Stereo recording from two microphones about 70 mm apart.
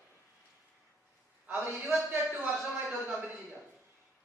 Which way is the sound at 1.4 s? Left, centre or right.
Right.